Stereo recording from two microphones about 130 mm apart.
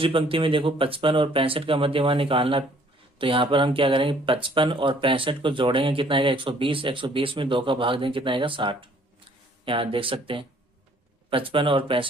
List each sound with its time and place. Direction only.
0.0 s speech: 45° right (ahead or behind)